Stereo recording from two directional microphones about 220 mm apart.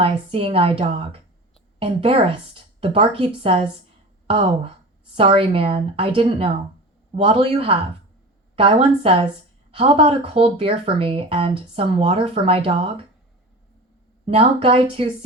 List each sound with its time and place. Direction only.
0.0 s speech: 25° right (ahead or behind)
14.3 s speech: 25° right (ahead or behind)